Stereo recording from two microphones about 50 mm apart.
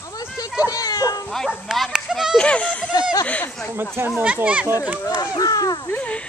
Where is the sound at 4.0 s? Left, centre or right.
Right.